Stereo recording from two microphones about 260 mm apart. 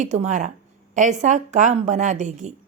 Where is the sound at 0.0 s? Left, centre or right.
Right.